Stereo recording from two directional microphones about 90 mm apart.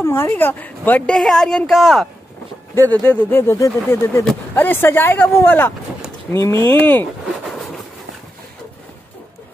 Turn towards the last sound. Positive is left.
turn(degrees=0)  # may be behind; listen again after turning